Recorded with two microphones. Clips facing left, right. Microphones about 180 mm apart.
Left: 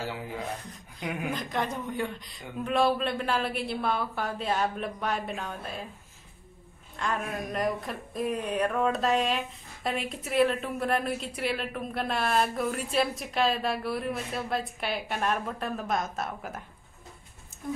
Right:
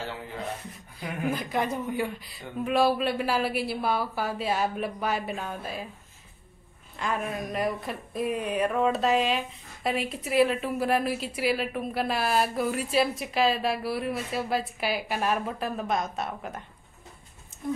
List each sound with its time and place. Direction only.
1.3 s a woman's voice: 5° right (ahead or behind)
7.0 s a woman's voice: 5° right (ahead or behind)